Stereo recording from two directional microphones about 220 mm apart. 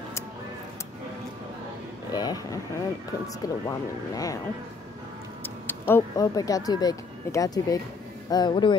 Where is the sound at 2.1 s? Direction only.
15° left (ahead or behind).